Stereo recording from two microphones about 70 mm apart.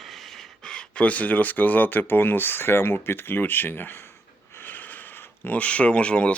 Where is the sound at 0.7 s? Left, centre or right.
Centre.